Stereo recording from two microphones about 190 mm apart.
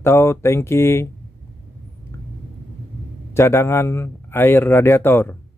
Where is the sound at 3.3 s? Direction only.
15° left (ahead or behind).